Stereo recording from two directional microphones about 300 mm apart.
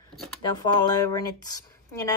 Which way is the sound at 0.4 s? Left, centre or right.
Centre.